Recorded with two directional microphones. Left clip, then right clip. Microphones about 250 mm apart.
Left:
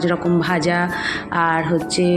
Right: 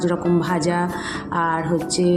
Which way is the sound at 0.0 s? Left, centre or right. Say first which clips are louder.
Left 2 dB; centre.